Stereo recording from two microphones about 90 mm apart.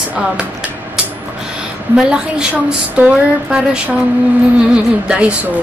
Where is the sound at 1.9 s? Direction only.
10° right (ahead or behind).